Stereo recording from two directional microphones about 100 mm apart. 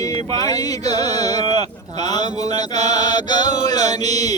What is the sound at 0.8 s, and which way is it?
Speech, 90° right.